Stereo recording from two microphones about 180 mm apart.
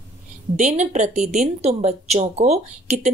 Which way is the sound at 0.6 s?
40° right (ahead or behind).